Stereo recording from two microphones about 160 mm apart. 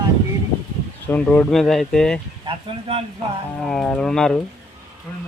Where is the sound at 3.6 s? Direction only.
5° left (ahead or behind).